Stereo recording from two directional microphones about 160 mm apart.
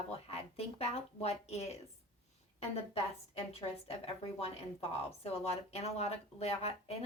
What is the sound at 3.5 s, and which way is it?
A woman's voice, 40° left (ahead or behind).